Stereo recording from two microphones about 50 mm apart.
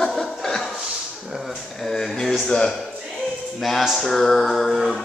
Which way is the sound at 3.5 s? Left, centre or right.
Centre.